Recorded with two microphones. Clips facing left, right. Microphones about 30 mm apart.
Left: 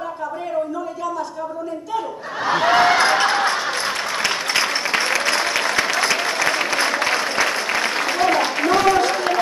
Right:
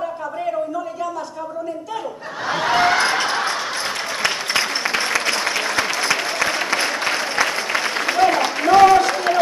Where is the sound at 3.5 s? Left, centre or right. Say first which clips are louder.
Left 2 dB; centre.